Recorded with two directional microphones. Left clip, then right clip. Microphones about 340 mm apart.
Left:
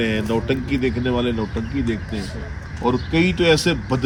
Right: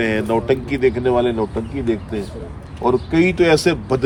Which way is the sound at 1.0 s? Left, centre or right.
Right.